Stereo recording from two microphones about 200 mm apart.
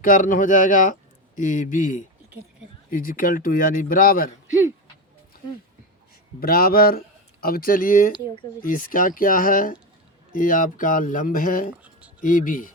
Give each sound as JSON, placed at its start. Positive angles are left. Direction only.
{"t": 0.0, "sound": "speech", "side_deg": 45}
{"t": 6.4, "sound": "speech", "side_deg": 45}
{"t": 11.8, "sound": "a sound", "side_deg": -5}
{"t": 12.2, "sound": "speech", "side_deg": 40}